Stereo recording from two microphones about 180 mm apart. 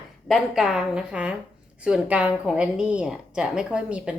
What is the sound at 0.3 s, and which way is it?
A woman's voice, centre (ahead or behind).